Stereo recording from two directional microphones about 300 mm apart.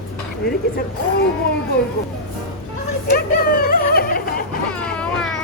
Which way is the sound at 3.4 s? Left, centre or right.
Left.